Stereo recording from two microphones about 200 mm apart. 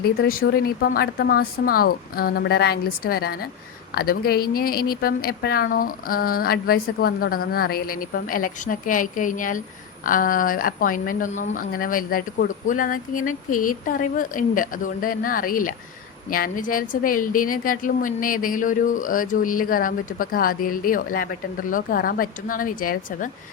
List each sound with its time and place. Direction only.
0.0 s a woman's voice: 50° left (ahead or behind)